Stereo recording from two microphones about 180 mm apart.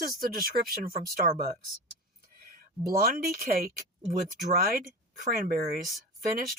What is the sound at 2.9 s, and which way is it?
A woman's voice, 55° right (ahead or behind).